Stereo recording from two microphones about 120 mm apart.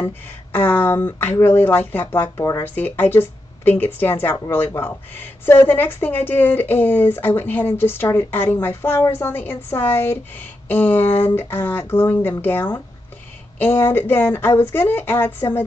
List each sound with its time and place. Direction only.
0.0 s speech: 15° left (ahead or behind)